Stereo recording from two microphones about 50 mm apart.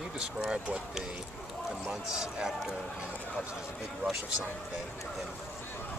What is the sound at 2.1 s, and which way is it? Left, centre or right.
Speech, centre.